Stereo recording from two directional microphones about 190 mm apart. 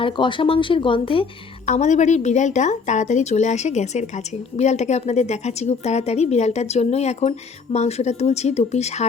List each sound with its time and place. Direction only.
0.0 s a woman's voice: 25° left (ahead or behind)